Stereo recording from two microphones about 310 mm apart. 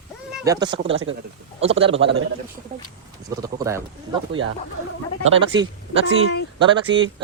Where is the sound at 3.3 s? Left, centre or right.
Centre.